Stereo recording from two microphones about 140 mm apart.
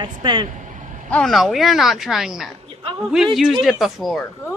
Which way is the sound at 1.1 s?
5° left (ahead or behind).